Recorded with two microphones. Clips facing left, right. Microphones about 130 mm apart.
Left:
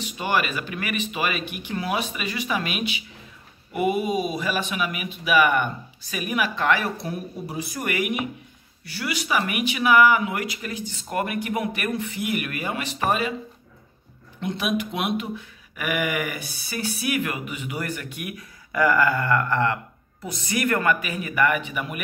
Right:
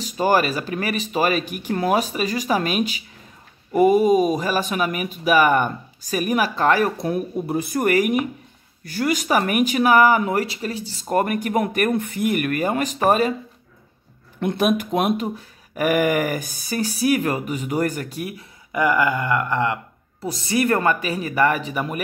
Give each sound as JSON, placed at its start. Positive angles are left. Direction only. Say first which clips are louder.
{"t": 0.0, "sound": "speech", "louder": "right 6 dB", "side_deg": -40}
{"t": 14.4, "sound": "speech", "louder": "right 6 dB", "side_deg": -50}
{"t": 18.7, "sound": "a sound", "louder": "right 1 dB", "side_deg": -20}
{"t": 20.2, "sound": "speech", "louder": "right 5 dB", "side_deg": -30}